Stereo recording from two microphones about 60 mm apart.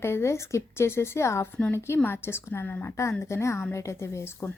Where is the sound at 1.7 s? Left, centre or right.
Left.